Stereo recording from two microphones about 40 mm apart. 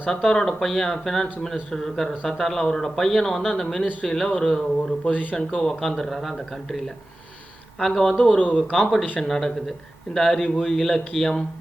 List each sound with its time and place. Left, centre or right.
0.1 s a man's voice: centre
5.1 s speech: left
5.4 s speech: left
5.6 s a man's voice: centre
8.2 s speech: left
8.7 s a man's voice: centre